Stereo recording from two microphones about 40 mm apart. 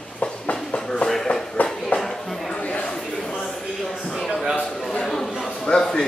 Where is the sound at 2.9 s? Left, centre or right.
Centre.